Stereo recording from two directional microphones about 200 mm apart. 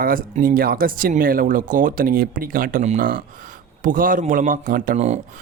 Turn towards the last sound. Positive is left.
turn(degrees=-35)  # may be behind; listen again after turning